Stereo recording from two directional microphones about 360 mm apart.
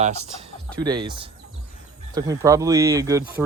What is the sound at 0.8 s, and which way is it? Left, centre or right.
Speech, centre.